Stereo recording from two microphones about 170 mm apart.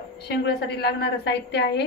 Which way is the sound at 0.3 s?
70° left (ahead or behind).